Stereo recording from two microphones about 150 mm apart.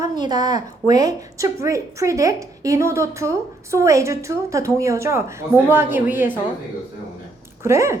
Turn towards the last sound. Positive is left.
turn(degrees=-20)  # may be behind; listen again after turning